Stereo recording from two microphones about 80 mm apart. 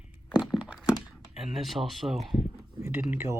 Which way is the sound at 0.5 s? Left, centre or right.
Centre.